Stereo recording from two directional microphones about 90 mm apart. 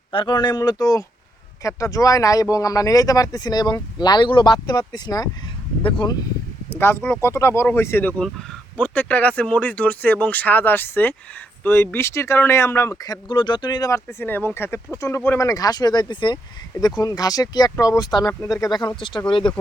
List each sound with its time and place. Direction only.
0.1 s speech: 65° left (ahead or behind); by 5.3 s 50° left (ahead or behind)
5.8 s speech: 65° left (ahead or behind)
6.7 s speech: 30° left (ahead or behind)
8.8 s speech: 15° left (ahead or behind); by 13.0 s 30° left (ahead or behind)
13.1 s speech: 55° left (ahead or behind)
13.9 s speech: 30° left (ahead or behind)
15.4 s speech: 40° left (ahead or behind)
16.8 s speech: 45° left (ahead or behind); by 19.2 s 60° left (ahead or behind)